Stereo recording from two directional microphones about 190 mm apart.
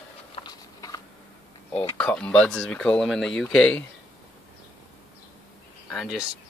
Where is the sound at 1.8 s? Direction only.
5° left (ahead or behind).